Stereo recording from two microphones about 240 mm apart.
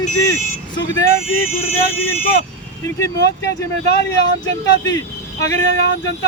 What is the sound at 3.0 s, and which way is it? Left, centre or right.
Speech, centre.